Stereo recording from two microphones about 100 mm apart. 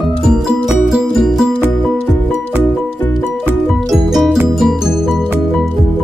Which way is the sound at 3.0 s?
25° left (ahead or behind).